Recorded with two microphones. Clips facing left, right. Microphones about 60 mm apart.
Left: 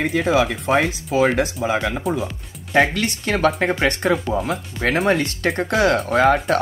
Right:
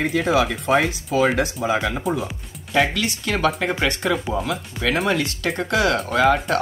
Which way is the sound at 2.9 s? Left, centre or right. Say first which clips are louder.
Left 2 dB; left.